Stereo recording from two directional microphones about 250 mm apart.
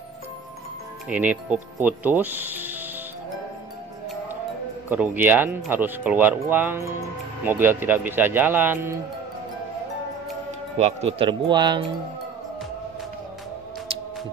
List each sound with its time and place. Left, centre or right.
1.0 s speech: centre
4.8 s speech: centre
10.8 s speech: right